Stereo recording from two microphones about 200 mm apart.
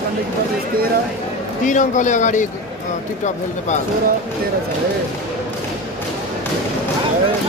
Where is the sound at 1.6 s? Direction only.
40° left (ahead or behind).